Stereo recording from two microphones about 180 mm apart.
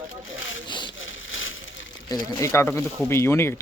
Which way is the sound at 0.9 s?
90° left.